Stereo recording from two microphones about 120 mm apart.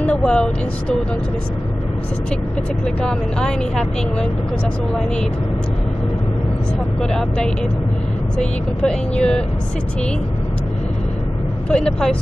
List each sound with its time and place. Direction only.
0.0 s speech: 10° left (ahead or behind)
3.0 s speech: 5° left (ahead or behind)
7.0 s speech: 5° left (ahead or behind)
11.7 s speech: 10° left (ahead or behind)